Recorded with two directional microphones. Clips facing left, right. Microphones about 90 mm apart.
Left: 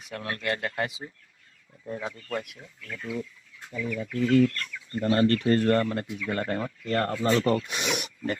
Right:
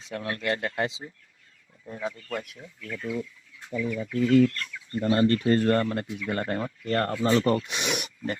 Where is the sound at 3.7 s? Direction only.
25° right (ahead or behind).